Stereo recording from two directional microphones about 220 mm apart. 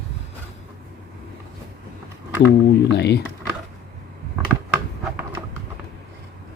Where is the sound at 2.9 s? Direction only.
50° left (ahead or behind).